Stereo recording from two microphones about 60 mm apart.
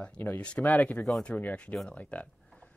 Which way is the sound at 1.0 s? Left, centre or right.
Left.